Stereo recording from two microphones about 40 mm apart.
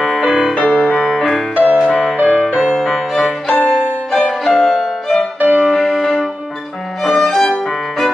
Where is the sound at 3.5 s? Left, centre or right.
Left.